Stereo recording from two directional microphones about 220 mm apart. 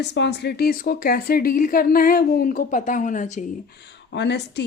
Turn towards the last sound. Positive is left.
turn(degrees=50)  # may be behind; listen again after turning